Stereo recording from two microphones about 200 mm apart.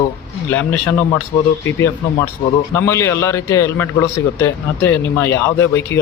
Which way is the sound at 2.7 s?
10° left (ahead or behind).